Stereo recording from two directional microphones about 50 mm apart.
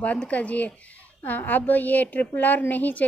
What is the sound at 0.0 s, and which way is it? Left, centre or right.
Speech, left.